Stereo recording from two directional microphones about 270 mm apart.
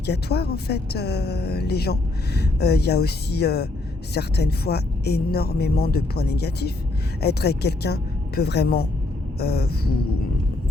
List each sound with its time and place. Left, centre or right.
0.0 s speech: left